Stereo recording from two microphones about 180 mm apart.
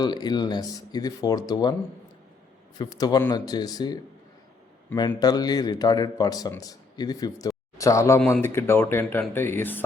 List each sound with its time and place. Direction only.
0.0 s a man's voice: 25° left (ahead or behind)
2.7 s a man's voice: 20° left (ahead or behind)